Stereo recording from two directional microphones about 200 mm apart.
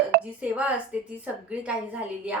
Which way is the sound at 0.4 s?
5° right (ahead or behind).